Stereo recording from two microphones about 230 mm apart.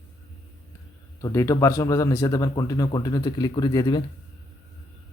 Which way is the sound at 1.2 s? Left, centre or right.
Centre.